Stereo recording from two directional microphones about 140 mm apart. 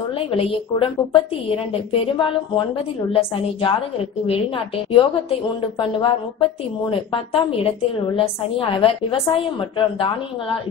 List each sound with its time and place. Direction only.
0.1 s a woman's voice: 40° left (ahead or behind)